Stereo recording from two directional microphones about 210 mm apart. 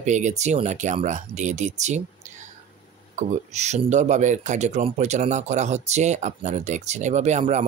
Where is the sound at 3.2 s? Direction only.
35° right (ahead or behind).